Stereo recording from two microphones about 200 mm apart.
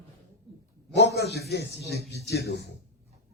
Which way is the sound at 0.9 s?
55° left (ahead or behind).